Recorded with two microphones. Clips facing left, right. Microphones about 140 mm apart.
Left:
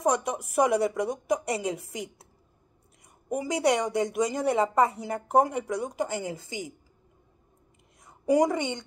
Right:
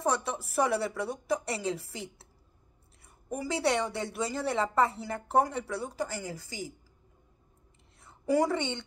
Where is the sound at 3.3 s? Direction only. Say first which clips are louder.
Left 4 dB; 20° left (ahead or behind).